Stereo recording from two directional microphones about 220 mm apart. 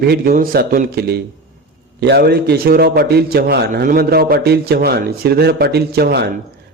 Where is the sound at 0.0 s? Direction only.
45° right (ahead or behind).